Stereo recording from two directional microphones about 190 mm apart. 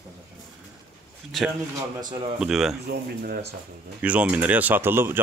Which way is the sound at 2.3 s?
Centre (ahead or behind).